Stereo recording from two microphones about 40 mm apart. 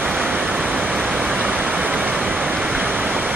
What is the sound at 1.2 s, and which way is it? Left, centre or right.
Pink noise, right.